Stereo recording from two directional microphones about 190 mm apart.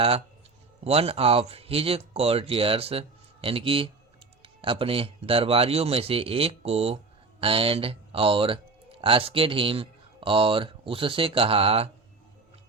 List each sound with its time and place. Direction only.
0.9 s speech: 30° right (ahead or behind)